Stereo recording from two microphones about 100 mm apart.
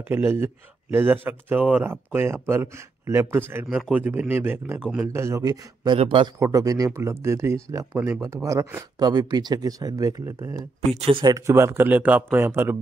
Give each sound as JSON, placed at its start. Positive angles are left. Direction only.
{"t": 0.1, "sound": "speech", "side_deg": -25}
{"t": 11.0, "sound": "speech", "side_deg": -65}
{"t": 11.2, "sound": "speech", "side_deg": -30}